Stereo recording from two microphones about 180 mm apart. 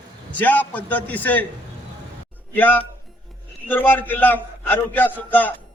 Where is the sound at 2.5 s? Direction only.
10° left (ahead or behind).